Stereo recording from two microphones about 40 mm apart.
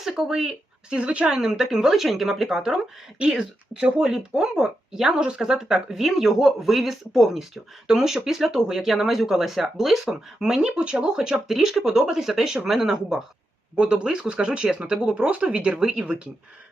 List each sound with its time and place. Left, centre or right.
0.0 s speech: centre
0.9 s speech: right
1.4 s speech: centre
3.2 s speech: right
11.4 s speech: centre
13.7 s speech: right
15.1 s speech: right
15.8 s speech: centre